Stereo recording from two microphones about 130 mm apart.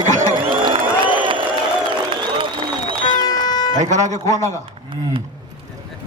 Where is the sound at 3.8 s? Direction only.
65° right (ahead or behind).